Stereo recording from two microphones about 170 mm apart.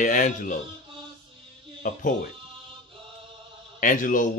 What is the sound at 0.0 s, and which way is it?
Speech, 50° left (ahead or behind).